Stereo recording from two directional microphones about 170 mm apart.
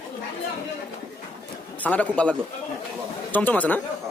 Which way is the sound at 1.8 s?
10° left (ahead or behind).